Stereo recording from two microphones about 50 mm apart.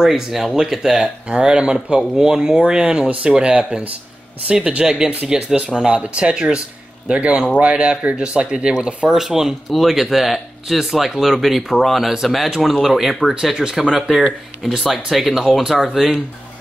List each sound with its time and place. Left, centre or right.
0.0 s speech: centre
1.3 s speech: centre